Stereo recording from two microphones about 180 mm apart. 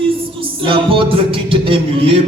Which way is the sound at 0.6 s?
30° right (ahead or behind).